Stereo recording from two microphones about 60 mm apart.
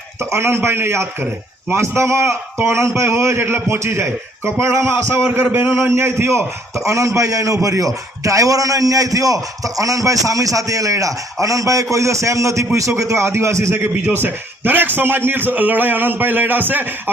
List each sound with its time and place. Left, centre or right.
0.2 s a man's voice: right
5.3 s a man's voice: right
5.6 s a man's voice: right
14.2 s a man's voice: right